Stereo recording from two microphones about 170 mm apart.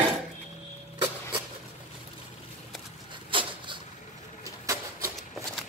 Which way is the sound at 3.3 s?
30° right (ahead or behind).